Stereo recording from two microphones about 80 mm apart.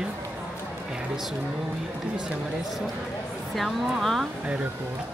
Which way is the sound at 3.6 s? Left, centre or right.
Centre.